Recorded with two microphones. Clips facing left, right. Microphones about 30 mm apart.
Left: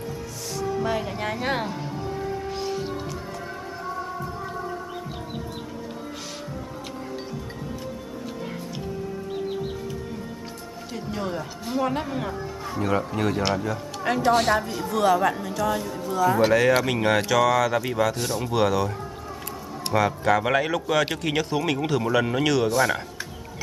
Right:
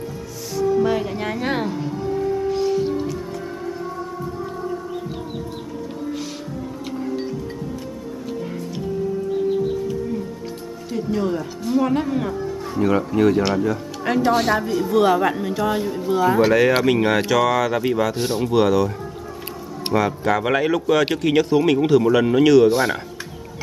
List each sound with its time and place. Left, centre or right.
0.6 s music: centre
10.9 s music: centre
12.7 s speech: centre
15.0 s speech: centre
16.3 s speech: centre
18.1 s speech: centre
18.4 s speech: centre
19.9 s speech: centre
22.7 s speech: centre